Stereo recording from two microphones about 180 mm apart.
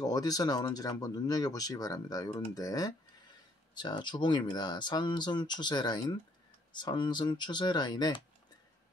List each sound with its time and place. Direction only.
0.0 s speech: 20° left (ahead or behind)